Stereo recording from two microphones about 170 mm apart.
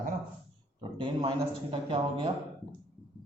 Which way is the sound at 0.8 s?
30° right (ahead or behind).